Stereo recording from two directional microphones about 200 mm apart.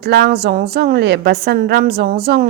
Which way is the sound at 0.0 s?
50° right (ahead or behind).